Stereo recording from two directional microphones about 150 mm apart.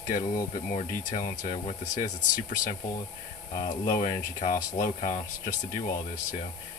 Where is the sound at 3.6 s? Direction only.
60° left (ahead or behind).